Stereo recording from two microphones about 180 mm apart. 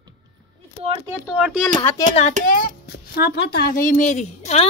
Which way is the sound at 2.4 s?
50° left (ahead or behind).